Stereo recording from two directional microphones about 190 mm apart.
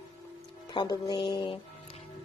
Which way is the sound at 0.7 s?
20° left (ahead or behind).